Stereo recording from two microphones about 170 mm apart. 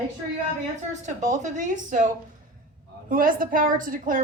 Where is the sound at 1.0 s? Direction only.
45° right (ahead or behind).